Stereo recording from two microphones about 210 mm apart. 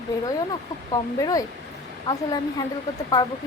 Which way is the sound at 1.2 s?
15° left (ahead or behind).